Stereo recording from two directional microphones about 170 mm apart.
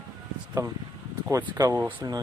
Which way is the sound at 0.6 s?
20° right (ahead or behind).